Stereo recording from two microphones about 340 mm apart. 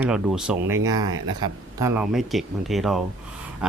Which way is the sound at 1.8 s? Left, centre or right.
Centre.